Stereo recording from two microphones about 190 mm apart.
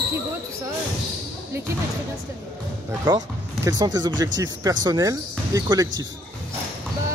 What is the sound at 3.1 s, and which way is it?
Speech, 20° right (ahead or behind).